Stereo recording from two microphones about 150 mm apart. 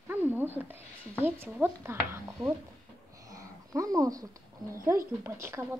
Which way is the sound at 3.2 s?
20° right (ahead or behind).